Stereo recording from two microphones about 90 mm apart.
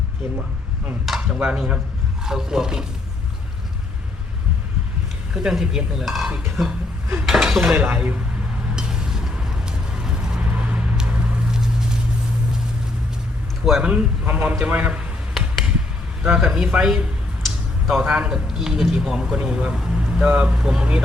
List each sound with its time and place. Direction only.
1.0 s speech: 5° right (ahead or behind)
5.3 s speech: 5° right (ahead or behind)
8.7 s vehicle: 5° right (ahead or behind)
11.5 s a sound: 5° right (ahead or behind)
13.7 s speech: 5° right (ahead or behind)
15.4 s a sound: centre (ahead or behind)
16.2 s speech: 10° right (ahead or behind)